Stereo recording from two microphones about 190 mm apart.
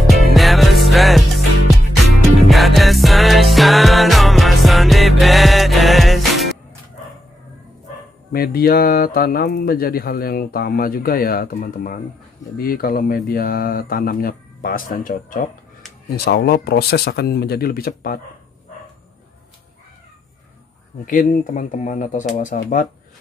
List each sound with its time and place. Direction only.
0.1 s music: centre (ahead or behind)
2.4 s music: centre (ahead or behind)
8.3 s speech: 55° left (ahead or behind)
21.0 s speech: 45° left (ahead or behind)